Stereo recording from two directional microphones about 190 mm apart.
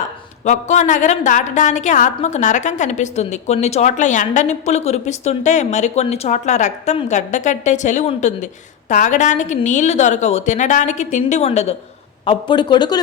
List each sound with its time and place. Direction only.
0.4 s a woman's voice: 40° left (ahead or behind); by 13.0 s 20° left (ahead or behind)